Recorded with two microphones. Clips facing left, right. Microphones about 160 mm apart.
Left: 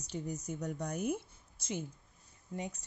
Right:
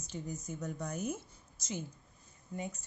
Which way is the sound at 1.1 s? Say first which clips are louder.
Left 5 dB; 60° left (ahead or behind).